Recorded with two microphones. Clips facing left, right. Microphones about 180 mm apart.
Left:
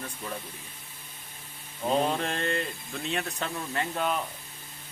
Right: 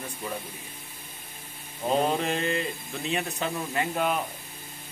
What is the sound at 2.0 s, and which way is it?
Speech, 5° right (ahead or behind).